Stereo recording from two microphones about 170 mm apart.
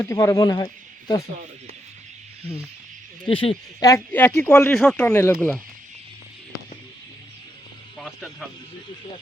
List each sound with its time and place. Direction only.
0.0 s speech: 15° left (ahead or behind)
3.2 s speech: 30° left (ahead or behind)
3.8 s speech: 15° left (ahead or behind)
5.0 s speech: 15° left (ahead or behind)
7.9 s speech: 5° left (ahead or behind)